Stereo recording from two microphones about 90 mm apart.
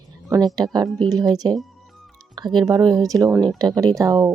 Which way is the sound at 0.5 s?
50° right (ahead or behind).